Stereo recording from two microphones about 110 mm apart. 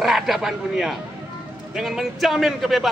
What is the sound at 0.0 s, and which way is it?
A man's voice, 5° right (ahead or behind).